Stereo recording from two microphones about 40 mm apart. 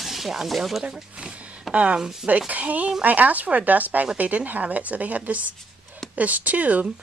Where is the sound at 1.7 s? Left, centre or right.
Right.